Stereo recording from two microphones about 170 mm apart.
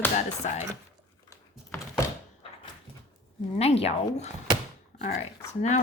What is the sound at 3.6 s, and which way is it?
Speech, 35° left (ahead or behind).